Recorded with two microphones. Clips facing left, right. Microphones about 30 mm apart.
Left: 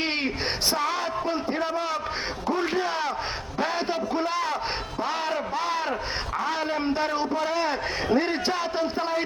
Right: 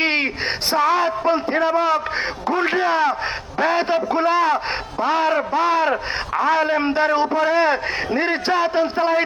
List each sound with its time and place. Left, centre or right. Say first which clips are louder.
0.0 s a sound: right 8 dB; right
0.8 s a man's voice: right 9 dB; centre
1.3 s a man's voice: right 10 dB; right
2.9 s a man's voice: right 9 dB; centre
6.7 s a man's voice: right 8 dB; right